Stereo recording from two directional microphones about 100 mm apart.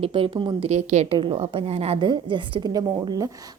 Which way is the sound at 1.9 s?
50° right (ahead or behind).